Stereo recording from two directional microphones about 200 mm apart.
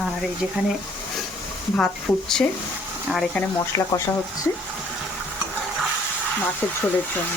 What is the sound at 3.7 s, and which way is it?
Speech, 15° left (ahead or behind).